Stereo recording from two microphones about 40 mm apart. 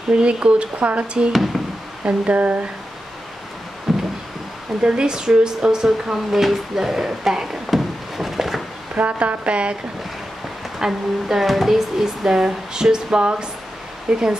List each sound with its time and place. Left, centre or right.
0.1 s speech: right
1.3 s speech: centre
2.0 s speech: right
3.9 s a sound: centre
4.8 s speech: right
6.3 s a sound: centre
8.9 s speech: right
10.8 s speech: centre